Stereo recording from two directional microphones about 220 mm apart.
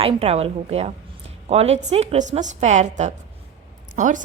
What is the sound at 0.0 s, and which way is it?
A woman's voice, 25° right (ahead or behind).